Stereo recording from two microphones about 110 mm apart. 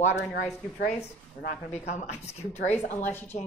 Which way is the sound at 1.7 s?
85° left.